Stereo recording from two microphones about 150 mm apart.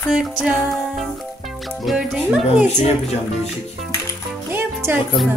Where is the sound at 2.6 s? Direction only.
50° left (ahead or behind).